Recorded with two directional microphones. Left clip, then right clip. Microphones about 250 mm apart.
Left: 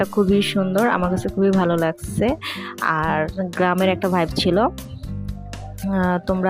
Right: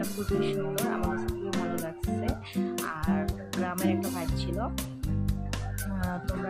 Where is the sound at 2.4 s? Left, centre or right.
Left.